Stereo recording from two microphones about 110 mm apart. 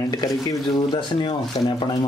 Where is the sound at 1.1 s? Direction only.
50° left (ahead or behind).